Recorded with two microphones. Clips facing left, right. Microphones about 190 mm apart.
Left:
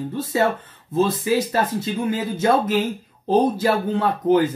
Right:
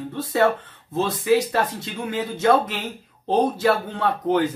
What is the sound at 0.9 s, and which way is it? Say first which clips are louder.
Speech: even; centre (ahead or behind).